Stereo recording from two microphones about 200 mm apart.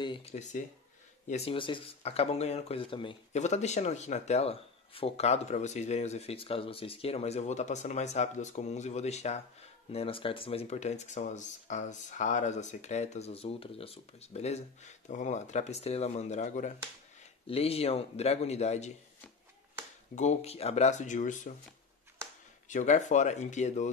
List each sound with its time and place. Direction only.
0.0 s speech: 25° left (ahead or behind)
20.2 s speech: 35° left (ahead or behind)
22.7 s speech: 40° left (ahead or behind)